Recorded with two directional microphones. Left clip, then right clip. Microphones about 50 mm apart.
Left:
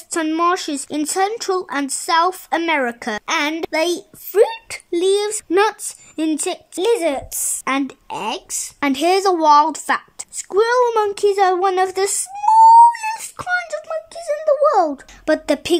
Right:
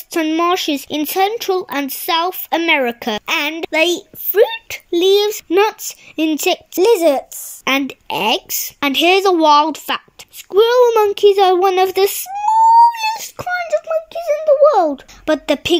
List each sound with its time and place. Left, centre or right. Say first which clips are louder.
0.1 s speech: right 2 dB; centre
3.6 s speech: right 4 dB; centre
6.8 s speech: right 5 dB; right
7.6 s speech: right 4 dB; centre
8.1 s speech: right 11 dB; right
8.7 s speech: right 4 dB; centre
12.4 s a sound: left 2 dB; centre
12.9 s wail: right 4 dB; right
13.4 s speech: right 1 dB; centre
14.1 s speech: right 4 dB; centre
15.2 s speech: right 2 dB; centre